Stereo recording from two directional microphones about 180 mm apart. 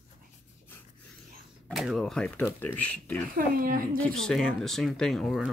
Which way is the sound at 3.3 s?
55° right (ahead or behind).